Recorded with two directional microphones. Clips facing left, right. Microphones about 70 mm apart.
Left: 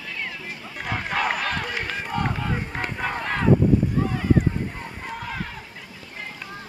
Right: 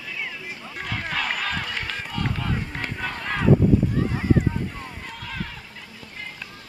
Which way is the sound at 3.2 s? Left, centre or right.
Centre.